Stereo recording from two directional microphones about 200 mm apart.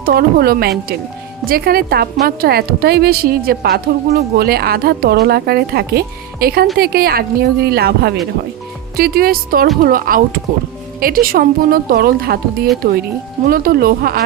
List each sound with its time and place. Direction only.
0.0 s a woman's voice: 50° right (ahead or behind)